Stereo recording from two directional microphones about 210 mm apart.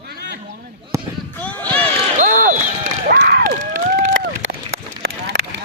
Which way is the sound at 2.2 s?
40° right (ahead or behind).